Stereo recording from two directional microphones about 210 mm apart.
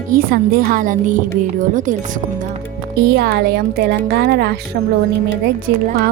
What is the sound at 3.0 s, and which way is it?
Speech, 50° right (ahead or behind).